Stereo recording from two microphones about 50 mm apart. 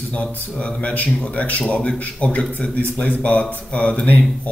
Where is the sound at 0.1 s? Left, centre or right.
Left.